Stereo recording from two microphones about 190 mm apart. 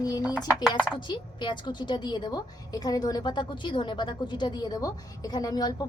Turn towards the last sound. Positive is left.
turn(degrees=20)  # may be behind; listen again after turning